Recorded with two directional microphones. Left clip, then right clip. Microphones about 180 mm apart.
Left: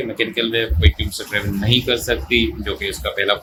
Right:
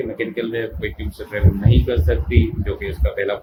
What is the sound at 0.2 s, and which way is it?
Speech, 25° left (ahead or behind).